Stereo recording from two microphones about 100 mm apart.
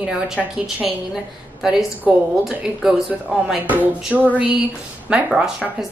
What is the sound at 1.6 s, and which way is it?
A woman's voice, 5° right (ahead or behind).